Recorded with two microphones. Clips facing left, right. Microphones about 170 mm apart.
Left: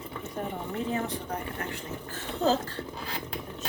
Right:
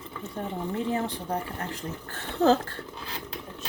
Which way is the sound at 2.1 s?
60° right (ahead or behind).